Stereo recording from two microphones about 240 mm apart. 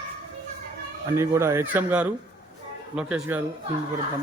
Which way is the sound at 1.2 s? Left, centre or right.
Centre.